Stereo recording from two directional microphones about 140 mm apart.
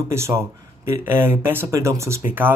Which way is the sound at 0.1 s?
20° right (ahead or behind).